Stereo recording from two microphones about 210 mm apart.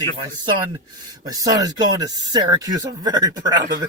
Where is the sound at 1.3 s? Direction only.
15° right (ahead or behind).